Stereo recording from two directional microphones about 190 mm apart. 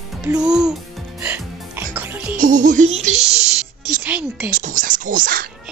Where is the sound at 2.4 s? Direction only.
40° right (ahead or behind).